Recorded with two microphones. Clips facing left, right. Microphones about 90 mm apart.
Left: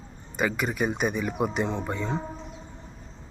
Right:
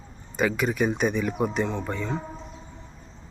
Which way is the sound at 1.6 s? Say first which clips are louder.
Even; 20° left (ahead or behind).